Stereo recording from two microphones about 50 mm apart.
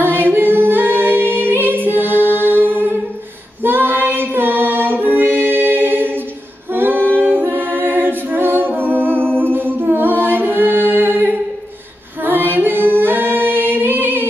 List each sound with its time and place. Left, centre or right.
0.0 s singing: right
3.6 s music: right
6.7 s a capella: right
9.4 s humming: right
12.2 s singing: right